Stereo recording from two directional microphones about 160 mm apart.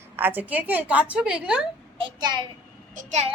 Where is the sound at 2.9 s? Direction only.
50° right (ahead or behind).